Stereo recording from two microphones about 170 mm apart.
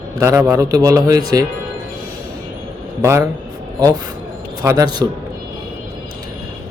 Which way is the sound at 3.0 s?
15° right (ahead or behind).